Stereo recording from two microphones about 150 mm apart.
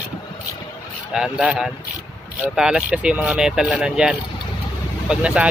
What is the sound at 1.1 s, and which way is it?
Speech, 5° right (ahead or behind).